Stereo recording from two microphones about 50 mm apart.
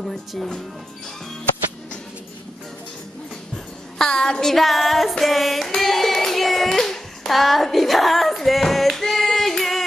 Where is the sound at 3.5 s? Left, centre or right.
Centre.